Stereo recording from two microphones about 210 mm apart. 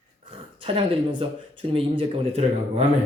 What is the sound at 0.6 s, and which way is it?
Speech, 25° right (ahead or behind).